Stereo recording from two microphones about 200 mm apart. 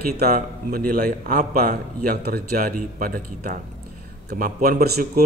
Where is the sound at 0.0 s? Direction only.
50° right (ahead or behind).